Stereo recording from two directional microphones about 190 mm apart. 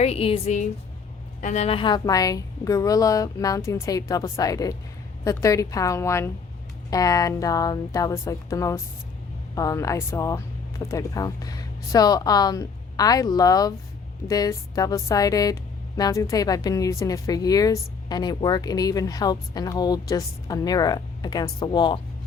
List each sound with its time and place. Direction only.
0.0 s speech: 30° left (ahead or behind)